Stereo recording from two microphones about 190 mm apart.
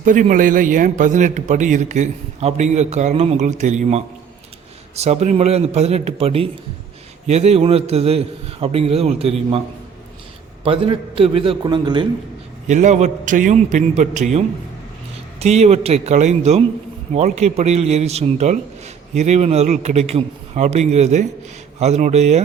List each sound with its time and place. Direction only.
0.0 s speech: 45° right (ahead or behind)
10.6 s a man's voice: 30° right (ahead or behind)
12.6 s speech: 40° right (ahead or behind)
15.4 s speech: 35° right (ahead or behind)